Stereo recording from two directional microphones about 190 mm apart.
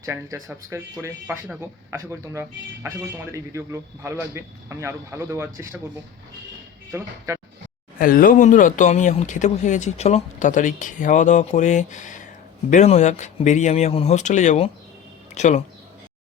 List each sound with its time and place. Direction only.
0.0 s speech: 15° right (ahead or behind)
7.9 s speech: 50° left (ahead or behind)